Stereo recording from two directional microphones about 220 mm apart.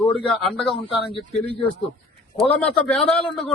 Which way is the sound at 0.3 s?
Centre (ahead or behind).